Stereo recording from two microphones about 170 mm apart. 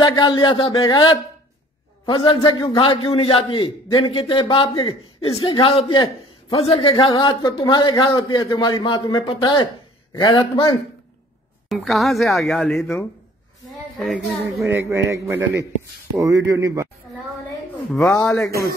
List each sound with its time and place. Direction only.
0.0 s a man's voice: 25° left (ahead or behind)
11.7 s speech: centre (ahead or behind)
14.6 s a man's voice: 15° right (ahead or behind)
17.9 s a man's voice: 10° left (ahead or behind)
18.5 s a man's voice: 65° right (ahead or behind)